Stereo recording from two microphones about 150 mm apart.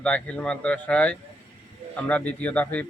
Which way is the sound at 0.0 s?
5° left (ahead or behind).